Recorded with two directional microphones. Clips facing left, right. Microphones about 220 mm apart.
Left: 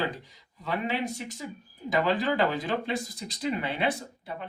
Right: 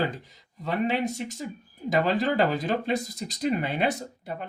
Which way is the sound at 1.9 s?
45° right (ahead or behind).